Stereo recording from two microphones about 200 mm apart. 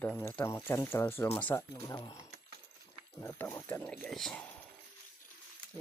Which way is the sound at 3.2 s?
10° left (ahead or behind).